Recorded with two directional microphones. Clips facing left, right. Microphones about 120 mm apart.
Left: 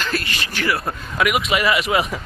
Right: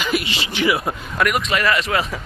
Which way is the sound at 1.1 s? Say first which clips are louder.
Left 1 dB; 5° left (ahead or behind).